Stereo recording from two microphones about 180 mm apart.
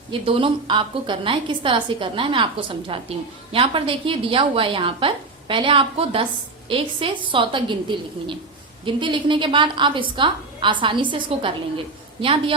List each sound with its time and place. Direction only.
0.1 s a woman's voice: 30° right (ahead or behind)